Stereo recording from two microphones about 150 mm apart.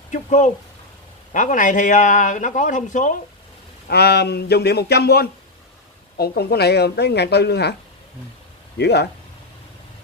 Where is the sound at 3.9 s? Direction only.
90° left.